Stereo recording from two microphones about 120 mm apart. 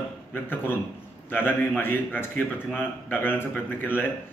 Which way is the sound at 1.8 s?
15° left (ahead or behind).